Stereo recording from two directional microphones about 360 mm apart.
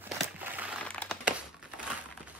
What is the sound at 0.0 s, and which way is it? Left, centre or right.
Crumpling, centre.